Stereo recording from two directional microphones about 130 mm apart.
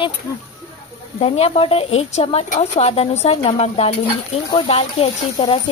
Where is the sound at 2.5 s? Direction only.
60° left (ahead or behind).